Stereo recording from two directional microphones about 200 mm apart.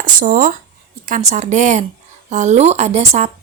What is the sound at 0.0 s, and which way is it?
A woman's voice, 45° right (ahead or behind).